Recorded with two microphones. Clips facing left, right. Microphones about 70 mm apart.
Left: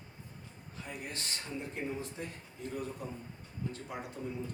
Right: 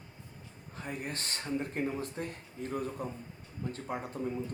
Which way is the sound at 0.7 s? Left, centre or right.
Right.